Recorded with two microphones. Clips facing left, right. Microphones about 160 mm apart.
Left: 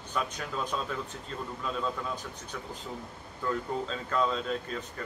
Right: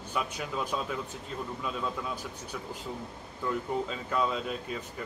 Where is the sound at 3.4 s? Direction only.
10° right (ahead or behind).